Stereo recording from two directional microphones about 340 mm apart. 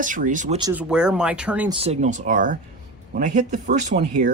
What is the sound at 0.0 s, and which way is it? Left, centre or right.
Speech, right.